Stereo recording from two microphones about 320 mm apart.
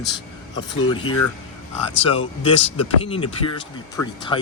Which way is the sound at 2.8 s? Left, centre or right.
Centre.